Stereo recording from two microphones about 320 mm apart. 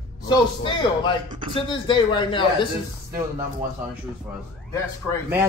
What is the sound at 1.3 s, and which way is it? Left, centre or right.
Speech, centre.